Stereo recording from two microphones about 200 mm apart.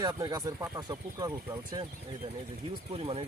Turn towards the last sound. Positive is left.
turn(degrees=-30)  # may be behind; listen again after turning